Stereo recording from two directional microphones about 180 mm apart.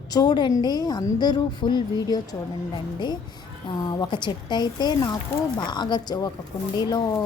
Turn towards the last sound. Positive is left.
turn(degrees=20)  # may be behind; listen again after turning